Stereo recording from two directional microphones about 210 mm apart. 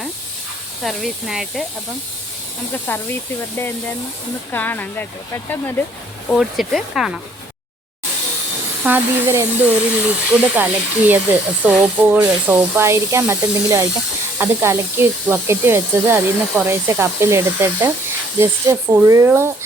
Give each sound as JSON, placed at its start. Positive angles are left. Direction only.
{"t": 0.8, "sound": "speech", "side_deg": 0}
{"t": 2.7, "sound": "speech", "side_deg": 10}
{"t": 4.5, "sound": "speech", "side_deg": 10}
{"t": 6.2, "sound": "speech", "side_deg": 0}
{"t": 8.8, "sound": "speech", "side_deg": -10}